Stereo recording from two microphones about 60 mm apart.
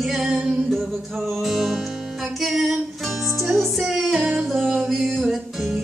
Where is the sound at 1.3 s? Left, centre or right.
Centre.